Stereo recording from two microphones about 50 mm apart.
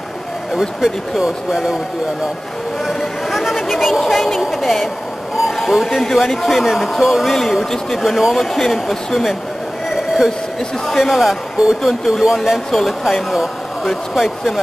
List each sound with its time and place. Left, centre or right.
0.6 s speech: centre
2.9 s a woman's voice: centre
9.8 s a sound: centre
10.9 s speech: centre